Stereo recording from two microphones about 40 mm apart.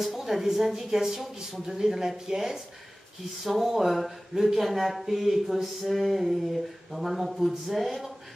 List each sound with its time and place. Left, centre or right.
0.0 s speech: centre